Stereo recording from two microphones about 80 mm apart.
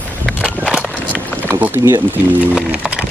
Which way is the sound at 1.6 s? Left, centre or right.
Right.